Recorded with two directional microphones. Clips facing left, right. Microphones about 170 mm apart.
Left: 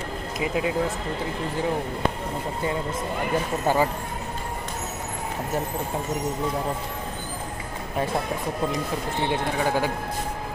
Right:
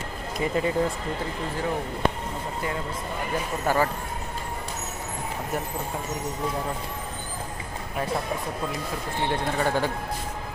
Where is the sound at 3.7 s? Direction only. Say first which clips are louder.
Left 2 dB; 20° left (ahead or behind).